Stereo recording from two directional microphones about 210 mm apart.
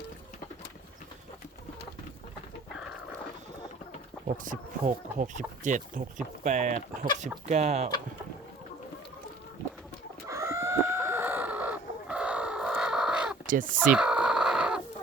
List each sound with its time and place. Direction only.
4.4 s speech: 40° right (ahead or behind)
10.2 s chicken: 15° right (ahead or behind)
13.5 s speech: 40° right (ahead or behind)
13.8 s chicken: 5° right (ahead or behind)